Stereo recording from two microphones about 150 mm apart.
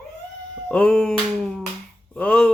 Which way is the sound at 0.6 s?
5° left (ahead or behind).